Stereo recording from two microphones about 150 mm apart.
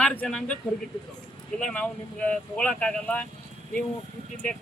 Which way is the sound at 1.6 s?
10° left (ahead or behind).